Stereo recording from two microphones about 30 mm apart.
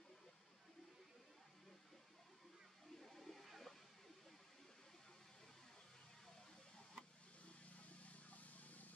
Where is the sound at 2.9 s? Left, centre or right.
Centre.